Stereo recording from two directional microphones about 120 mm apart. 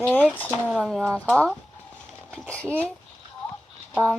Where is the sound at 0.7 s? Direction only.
5° left (ahead or behind).